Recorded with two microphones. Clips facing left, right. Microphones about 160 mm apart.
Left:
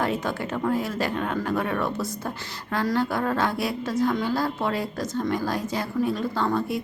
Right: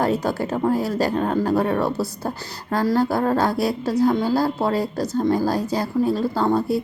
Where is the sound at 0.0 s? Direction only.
35° right (ahead or behind).